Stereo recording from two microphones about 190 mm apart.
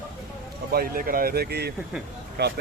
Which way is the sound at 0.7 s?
50° right (ahead or behind).